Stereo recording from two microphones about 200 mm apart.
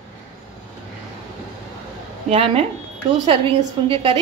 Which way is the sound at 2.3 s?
30° right (ahead or behind).